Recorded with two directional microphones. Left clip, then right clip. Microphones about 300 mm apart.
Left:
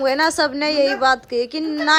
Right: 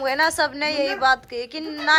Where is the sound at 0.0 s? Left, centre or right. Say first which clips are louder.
Left 3 dB; centre.